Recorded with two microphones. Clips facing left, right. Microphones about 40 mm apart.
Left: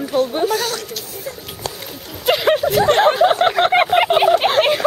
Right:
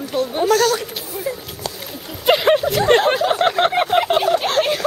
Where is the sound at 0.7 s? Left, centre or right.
Centre.